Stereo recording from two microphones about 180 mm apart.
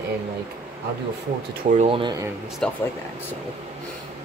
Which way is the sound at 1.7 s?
40° right (ahead or behind).